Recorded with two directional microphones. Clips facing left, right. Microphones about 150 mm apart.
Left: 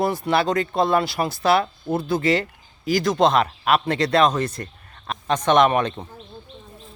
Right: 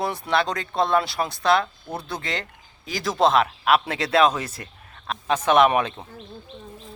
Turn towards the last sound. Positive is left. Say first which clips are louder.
# left 1 dB
turn(degrees=-5)  # may be behind; listen again after turning